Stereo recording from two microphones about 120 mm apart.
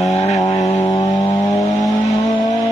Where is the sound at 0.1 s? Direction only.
65° left (ahead or behind).